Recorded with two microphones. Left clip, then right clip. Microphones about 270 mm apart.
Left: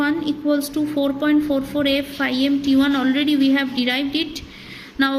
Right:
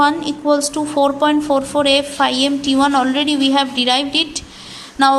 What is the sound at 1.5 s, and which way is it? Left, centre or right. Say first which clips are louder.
Speech: right 6 dB; right.